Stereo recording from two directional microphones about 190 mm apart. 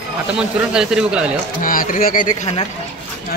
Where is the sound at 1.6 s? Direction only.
45° left (ahead or behind).